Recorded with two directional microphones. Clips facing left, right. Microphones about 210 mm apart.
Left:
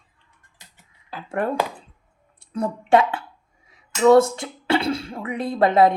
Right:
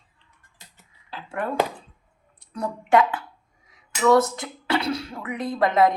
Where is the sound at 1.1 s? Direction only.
40° left (ahead or behind).